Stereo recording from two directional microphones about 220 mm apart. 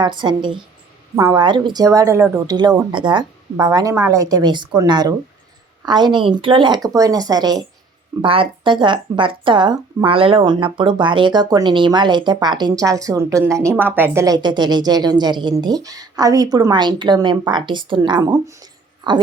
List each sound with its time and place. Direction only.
0.0 s a woman's voice: 20° right (ahead or behind)